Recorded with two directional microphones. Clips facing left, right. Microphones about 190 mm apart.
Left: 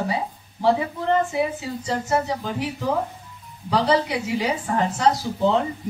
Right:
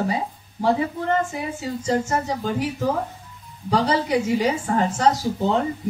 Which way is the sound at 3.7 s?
40° right (ahead or behind).